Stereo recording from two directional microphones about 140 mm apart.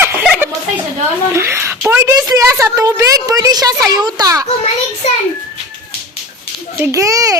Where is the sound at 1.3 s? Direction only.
20° right (ahead or behind).